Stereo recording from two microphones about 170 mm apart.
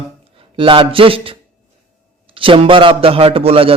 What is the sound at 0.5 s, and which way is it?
A man's voice, 30° right (ahead or behind).